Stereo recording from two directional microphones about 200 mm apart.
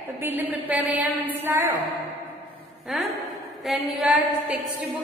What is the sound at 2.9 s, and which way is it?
Speech, centre (ahead or behind).